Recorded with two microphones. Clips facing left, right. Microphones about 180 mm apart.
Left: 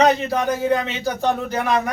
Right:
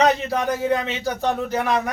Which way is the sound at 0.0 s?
Centre (ahead or behind).